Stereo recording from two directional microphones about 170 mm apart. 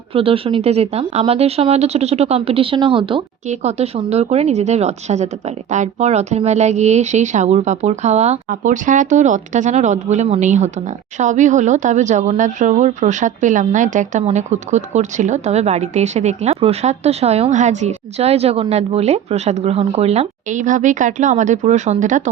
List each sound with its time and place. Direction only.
0.1 s speech: 35° right (ahead or behind)
3.5 s speech: 40° right (ahead or behind)